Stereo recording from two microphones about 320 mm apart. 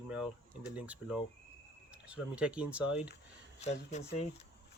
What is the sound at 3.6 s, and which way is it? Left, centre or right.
Speech, left.